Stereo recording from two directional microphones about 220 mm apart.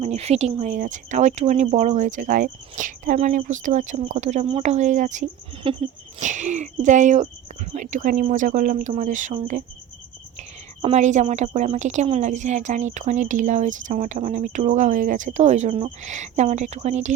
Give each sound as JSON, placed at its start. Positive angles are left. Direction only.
{"t": 0.0, "sound": "speech", "side_deg": -30}